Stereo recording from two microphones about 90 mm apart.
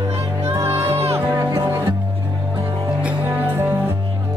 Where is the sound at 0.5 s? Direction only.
30° right (ahead or behind).